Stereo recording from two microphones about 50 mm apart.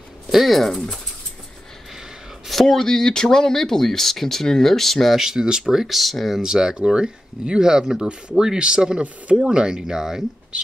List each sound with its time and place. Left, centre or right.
0.3 s speech: centre
2.4 s speech: centre
5.2 s speech: centre